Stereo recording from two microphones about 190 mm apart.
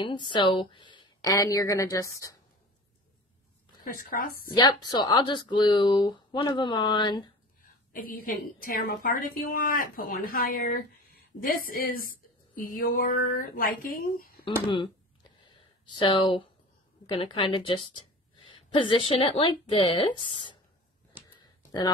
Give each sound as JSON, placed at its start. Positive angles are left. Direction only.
{"t": 0.3, "sound": "speech", "side_deg": 25}
{"t": 3.8, "sound": "a woman's voice", "side_deg": 45}
{"t": 4.5, "sound": "speech", "side_deg": 25}
{"t": 7.9, "sound": "a woman's voice", "side_deg": 50}
{"t": 15.4, "sound": "a sound", "side_deg": 25}
{"t": 17.0, "sound": "a woman's voice", "side_deg": 25}
{"t": 21.3, "sound": "a sound", "side_deg": 25}